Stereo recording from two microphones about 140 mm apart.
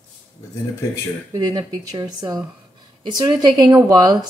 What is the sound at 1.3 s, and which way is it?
A woman's voice, 30° right (ahead or behind).